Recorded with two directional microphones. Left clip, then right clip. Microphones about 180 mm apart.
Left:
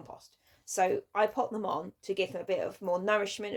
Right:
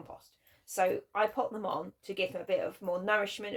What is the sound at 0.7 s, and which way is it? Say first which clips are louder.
Speech: left 1 dB; 45° left (ahead or behind).